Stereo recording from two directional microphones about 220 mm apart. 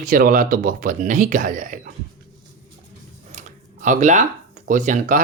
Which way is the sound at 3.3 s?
35° right (ahead or behind).